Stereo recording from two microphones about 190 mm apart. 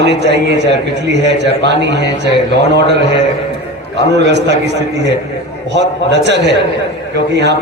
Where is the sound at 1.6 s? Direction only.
65° right (ahead or behind).